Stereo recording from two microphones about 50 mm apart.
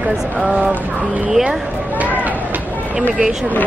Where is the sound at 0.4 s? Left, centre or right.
Right.